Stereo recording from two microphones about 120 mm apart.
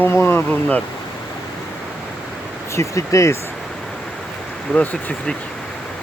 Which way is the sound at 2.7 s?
25° left (ahead or behind).